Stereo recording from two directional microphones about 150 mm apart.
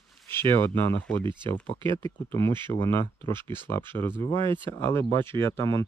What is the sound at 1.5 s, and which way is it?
Speech, 15° left (ahead or behind).